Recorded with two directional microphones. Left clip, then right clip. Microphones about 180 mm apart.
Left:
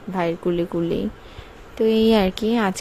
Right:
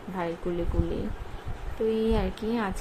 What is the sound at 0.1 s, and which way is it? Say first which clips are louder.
Speech: left 9 dB; 45° left (ahead or behind).